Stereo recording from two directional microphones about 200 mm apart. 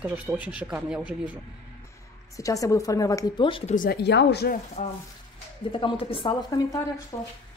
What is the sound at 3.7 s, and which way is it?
Speech, 50° left (ahead or behind).